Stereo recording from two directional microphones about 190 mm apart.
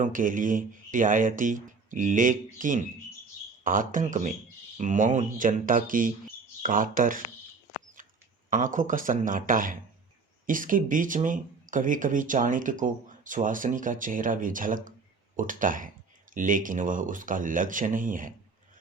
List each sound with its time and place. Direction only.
0.0 s speech: 45° right (ahead or behind)
8.4 s speech: 45° right (ahead or behind)